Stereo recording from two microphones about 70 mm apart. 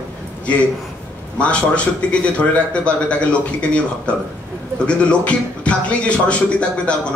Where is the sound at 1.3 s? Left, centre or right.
Centre.